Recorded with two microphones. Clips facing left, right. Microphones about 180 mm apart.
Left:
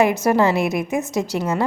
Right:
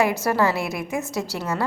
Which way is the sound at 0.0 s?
20° left (ahead or behind).